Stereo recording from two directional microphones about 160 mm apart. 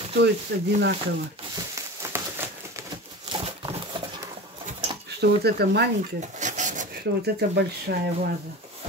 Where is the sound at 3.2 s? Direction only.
30° right (ahead or behind).